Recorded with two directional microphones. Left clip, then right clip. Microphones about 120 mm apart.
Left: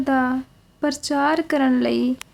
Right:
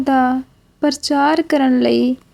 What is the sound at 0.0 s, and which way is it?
A woman's voice, 35° right (ahead or behind).